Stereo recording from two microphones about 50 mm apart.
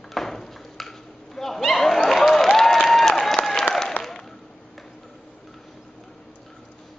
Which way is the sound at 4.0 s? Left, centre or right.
Right.